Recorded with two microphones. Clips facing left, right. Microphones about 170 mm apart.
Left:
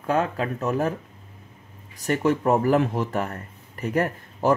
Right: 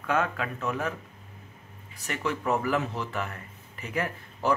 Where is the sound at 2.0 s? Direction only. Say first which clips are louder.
Left 8 dB; 45° left (ahead or behind).